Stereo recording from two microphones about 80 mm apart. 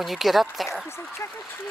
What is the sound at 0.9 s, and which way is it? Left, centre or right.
Speech, left.